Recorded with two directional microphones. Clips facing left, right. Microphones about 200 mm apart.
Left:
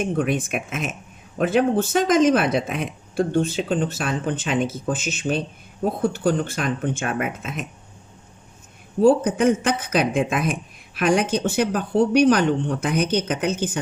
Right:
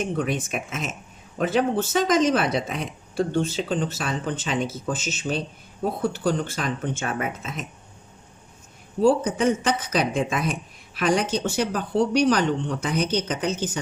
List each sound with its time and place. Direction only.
0.0 s speech: 55° left (ahead or behind)
9.0 s speech: 55° left (ahead or behind)